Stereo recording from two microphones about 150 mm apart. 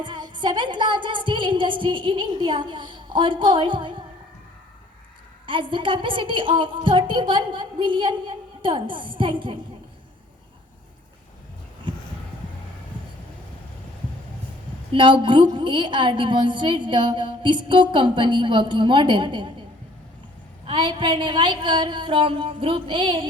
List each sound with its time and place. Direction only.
0.0 s music: 30° right (ahead or behind)
5.5 s a woman's voice: 35° right (ahead or behind)
14.9 s a woman's voice: 35° right (ahead or behind)
20.7 s a woman's voice: 35° right (ahead or behind)